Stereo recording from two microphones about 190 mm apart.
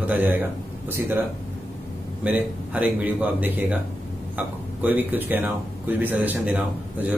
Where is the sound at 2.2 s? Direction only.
5° right (ahead or behind).